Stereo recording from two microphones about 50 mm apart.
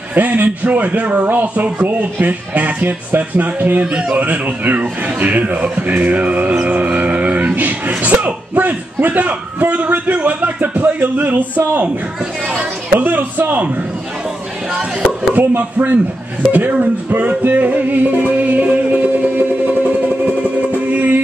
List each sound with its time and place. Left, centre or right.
0.1 s a man's voice: right
3.8 s speech: centre
4.2 s a man's voice: right
6.7 s a sound: right
8.0 s music: right
9.6 s a sound: right
12.5 s chatter: right
14.7 s speech: right
15.3 s a man's voice: right
16.7 s music: right